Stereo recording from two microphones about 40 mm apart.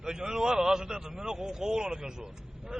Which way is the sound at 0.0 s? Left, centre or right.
Centre.